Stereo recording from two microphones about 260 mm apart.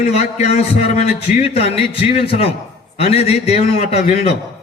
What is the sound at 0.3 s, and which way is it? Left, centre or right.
A man's voice, left.